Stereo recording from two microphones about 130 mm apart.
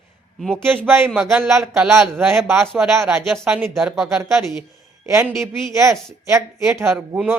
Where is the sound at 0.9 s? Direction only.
15° right (ahead or behind).